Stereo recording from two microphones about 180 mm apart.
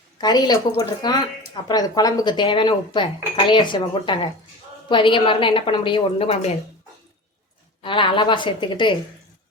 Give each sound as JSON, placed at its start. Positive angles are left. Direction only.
{"t": 0.2, "sound": "speech", "side_deg": 20}
{"t": 7.8, "sound": "speech", "side_deg": 25}